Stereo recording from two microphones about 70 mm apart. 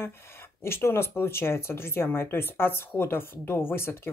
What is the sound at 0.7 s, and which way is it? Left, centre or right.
Speech, left.